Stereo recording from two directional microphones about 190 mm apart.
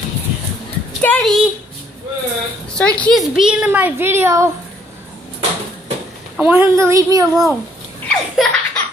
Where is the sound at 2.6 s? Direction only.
5° left (ahead or behind); by 4.5 s 15° right (ahead or behind).